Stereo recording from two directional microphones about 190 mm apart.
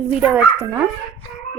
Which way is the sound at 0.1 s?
5° right (ahead or behind).